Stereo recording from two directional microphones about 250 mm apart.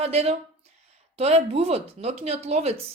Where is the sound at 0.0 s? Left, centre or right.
Right.